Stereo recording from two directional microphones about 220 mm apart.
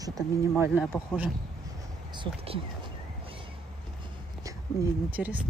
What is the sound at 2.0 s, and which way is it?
Speech, 25° right (ahead or behind).